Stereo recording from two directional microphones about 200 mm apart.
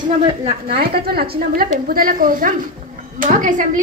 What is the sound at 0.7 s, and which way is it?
A woman's voice, 50° right (ahead or behind).